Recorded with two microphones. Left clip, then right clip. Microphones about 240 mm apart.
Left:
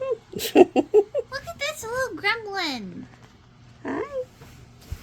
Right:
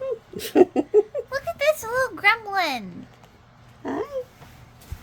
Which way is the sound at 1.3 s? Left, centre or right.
Right.